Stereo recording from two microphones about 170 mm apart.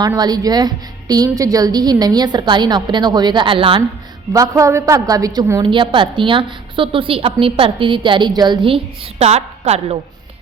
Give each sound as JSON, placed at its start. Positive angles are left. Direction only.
{"t": 0.0, "sound": "a woman's voice", "side_deg": -25}
{"t": 4.3, "sound": "a woman's voice", "side_deg": -20}